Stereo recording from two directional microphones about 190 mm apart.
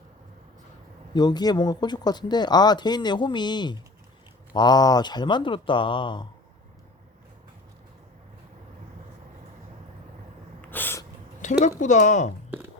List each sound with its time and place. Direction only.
1.1 s speech: 20° left (ahead or behind)
10.6 s a sound: 10° left (ahead or behind)
11.4 s speech: 40° left (ahead or behind)